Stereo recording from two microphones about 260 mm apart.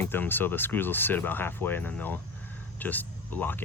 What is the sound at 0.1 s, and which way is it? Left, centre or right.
Speech, centre.